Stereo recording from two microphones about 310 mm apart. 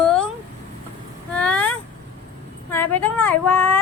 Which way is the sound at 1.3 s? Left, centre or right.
Centre.